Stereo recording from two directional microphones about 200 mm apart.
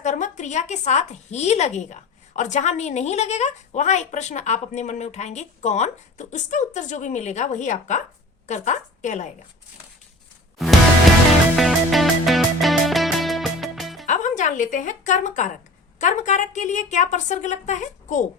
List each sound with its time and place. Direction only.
0.0 s a woman's voice: 35° left (ahead or behind)
11.5 s music: centre (ahead or behind)
14.1 s a woman's voice: 40° left (ahead or behind)